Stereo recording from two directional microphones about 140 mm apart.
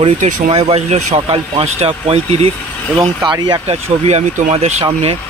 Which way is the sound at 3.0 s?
30° right (ahead or behind).